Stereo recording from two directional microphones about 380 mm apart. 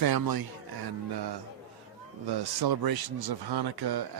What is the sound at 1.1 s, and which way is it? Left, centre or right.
A man's voice, right.